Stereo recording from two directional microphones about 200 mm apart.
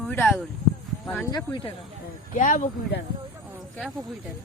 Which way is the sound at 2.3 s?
40° left (ahead or behind).